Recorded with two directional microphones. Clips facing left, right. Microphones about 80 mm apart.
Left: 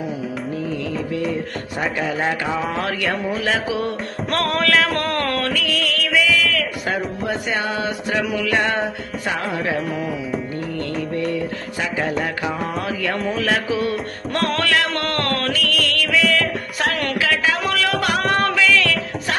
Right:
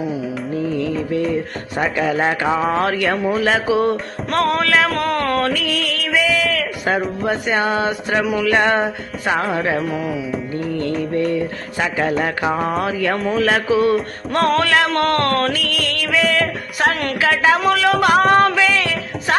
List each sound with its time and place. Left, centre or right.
2.0 s a sound: right
2.8 s speech: right
4.3 s music: centre
5.5 s music: right
7.3 s speech: right
8.4 s music: right
9.5 s speech: right
11.8 s speech: right
12.2 s music: right
13.3 s speech: right
14.9 s music: right
17.7 s music: right
18.0 s music: right